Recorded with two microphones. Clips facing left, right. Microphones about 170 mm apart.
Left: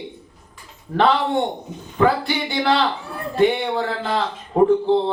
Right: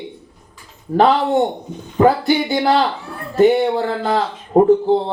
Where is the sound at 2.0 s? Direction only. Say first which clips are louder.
Right 5 dB; 45° right (ahead or behind).